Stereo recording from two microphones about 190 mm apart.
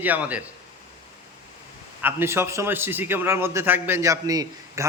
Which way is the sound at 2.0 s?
10° right (ahead or behind).